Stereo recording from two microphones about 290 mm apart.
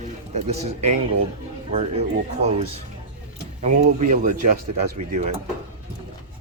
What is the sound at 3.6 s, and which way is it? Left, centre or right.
Speech, right.